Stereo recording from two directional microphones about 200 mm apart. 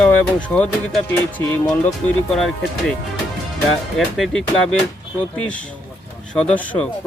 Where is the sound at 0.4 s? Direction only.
5° left (ahead or behind).